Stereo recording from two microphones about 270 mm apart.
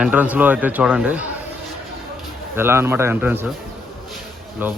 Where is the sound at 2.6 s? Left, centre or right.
Centre.